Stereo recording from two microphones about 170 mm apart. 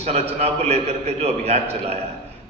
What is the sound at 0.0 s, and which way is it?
A man's voice, 40° right (ahead or behind).